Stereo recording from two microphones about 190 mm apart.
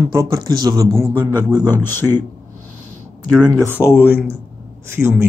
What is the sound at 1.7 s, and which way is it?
Speech, 10° left (ahead or behind).